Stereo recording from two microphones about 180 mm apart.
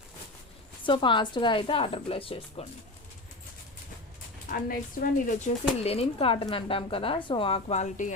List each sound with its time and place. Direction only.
0.9 s a woman's voice: 25° left (ahead or behind)
4.4 s a woman's voice: 50° left (ahead or behind)
5.8 s speech: 35° left (ahead or behind)